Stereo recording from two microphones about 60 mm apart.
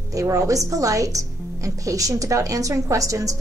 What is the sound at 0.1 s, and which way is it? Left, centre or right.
Speech, right.